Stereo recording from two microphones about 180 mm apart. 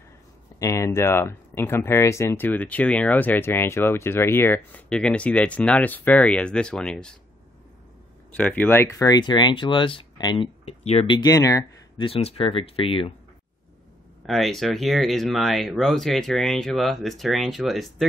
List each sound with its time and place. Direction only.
0.6 s speech: 15° left (ahead or behind)
8.4 s speech: 10° left (ahead or behind)
12.1 s speech: 35° left (ahead or behind)
14.2 s speech: centre (ahead or behind)